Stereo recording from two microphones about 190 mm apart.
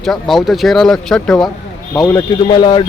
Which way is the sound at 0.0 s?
Centre (ahead or behind).